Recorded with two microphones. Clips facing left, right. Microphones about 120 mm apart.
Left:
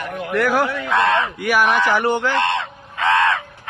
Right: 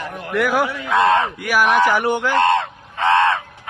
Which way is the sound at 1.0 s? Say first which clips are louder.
Right 4 dB; 35° right (ahead or behind).